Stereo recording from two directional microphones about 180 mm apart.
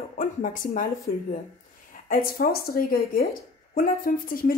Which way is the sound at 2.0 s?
55° left (ahead or behind).